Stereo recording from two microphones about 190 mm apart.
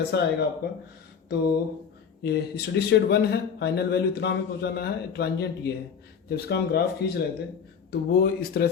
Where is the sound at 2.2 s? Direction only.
60° left (ahead or behind).